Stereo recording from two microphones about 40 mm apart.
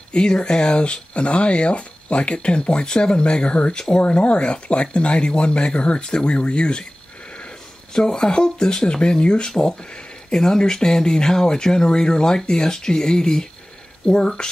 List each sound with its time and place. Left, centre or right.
0.1 s speech: left
9.5 s speech: centre